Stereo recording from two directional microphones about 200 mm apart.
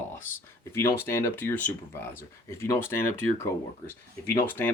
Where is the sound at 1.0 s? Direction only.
10° left (ahead or behind).